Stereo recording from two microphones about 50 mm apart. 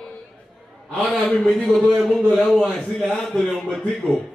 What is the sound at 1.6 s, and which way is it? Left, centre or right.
A man's voice, centre.